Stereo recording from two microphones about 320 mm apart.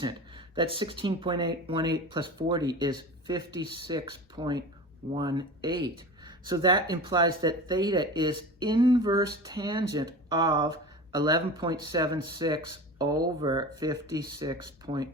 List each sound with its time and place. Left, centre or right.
0.5 s speech: centre
5.7 s speech: right
6.5 s speech: centre